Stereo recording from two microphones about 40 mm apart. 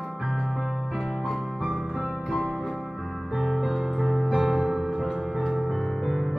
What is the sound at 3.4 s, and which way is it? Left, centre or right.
Music, centre.